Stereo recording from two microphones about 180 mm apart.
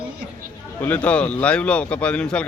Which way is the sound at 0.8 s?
10° left (ahead or behind).